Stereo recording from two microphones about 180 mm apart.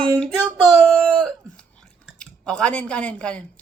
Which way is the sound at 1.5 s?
5° left (ahead or behind).